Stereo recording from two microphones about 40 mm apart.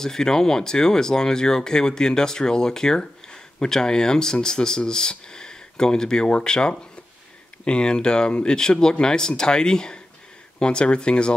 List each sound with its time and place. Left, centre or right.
0.0 s speech: centre